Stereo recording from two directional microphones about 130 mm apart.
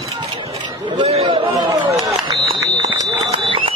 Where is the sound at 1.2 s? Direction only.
35° right (ahead or behind).